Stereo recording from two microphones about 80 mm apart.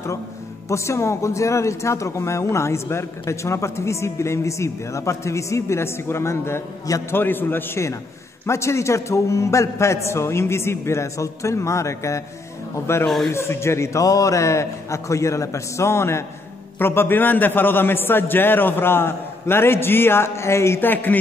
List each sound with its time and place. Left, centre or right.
0.7 s a man's voice: left